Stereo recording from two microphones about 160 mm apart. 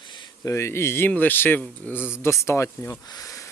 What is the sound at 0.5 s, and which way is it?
Speech, 15° left (ahead or behind).